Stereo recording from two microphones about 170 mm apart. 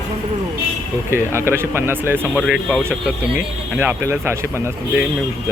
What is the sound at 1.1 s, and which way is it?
Speech, 15° right (ahead or behind).